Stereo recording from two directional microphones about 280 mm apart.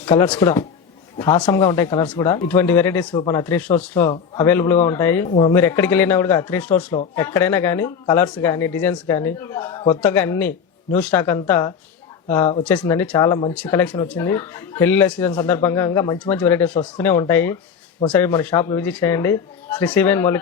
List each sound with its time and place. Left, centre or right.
0.0 s speech: centre
5.3 s speech: centre
5.5 s speech: centre